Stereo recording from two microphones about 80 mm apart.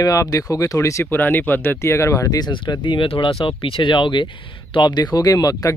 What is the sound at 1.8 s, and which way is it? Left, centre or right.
Speech, left.